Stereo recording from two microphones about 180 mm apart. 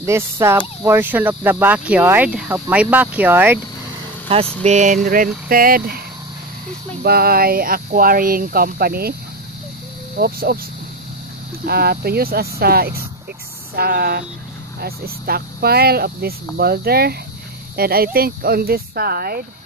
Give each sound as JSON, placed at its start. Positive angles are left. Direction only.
{"t": 0.0, "sound": "speech", "side_deg": -15}
{"t": 4.6, "sound": "vehicle", "side_deg": -45}
{"t": 7.0, "sound": "speech", "side_deg": -60}
{"t": 10.1, "sound": "speech", "side_deg": -60}
{"t": 11.6, "sound": "speech", "side_deg": -60}